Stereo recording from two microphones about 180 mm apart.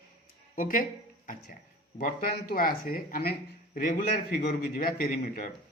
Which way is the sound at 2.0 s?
55° left (ahead or behind).